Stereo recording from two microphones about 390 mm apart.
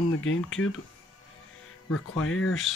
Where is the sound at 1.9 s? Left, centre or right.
Left.